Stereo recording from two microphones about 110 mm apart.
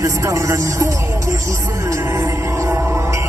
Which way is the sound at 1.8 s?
25° right (ahead or behind).